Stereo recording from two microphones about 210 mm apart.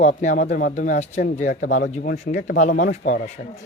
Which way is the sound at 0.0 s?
35° left (ahead or behind).